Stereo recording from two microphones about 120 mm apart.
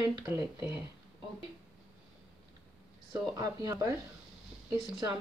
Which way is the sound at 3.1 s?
30° right (ahead or behind).